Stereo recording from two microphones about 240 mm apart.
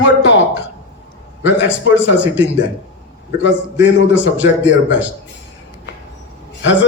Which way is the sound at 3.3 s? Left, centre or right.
Left.